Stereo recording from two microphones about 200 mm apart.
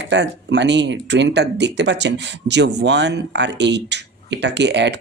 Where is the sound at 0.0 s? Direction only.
60° right (ahead or behind).